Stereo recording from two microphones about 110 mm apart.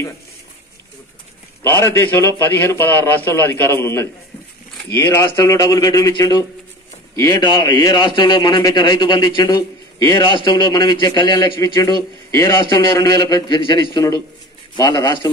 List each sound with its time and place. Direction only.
1.6 s a man's voice: 25° left (ahead or behind); by 13.6 s 40° left (ahead or behind)
13.6 s a man's voice: 50° left (ahead or behind)
14.8 s a man's voice: 35° left (ahead or behind)